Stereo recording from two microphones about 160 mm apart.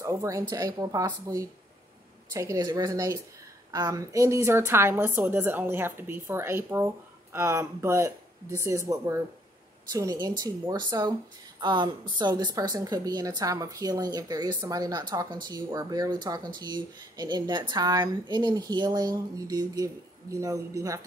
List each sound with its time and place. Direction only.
0.0 s a woman's voice: 20° right (ahead or behind)